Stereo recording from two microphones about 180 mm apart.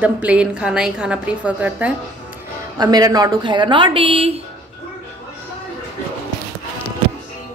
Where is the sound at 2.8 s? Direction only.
20° right (ahead or behind).